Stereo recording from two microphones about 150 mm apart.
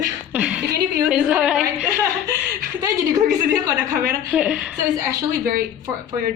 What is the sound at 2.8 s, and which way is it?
A woman's voice, 20° right (ahead or behind).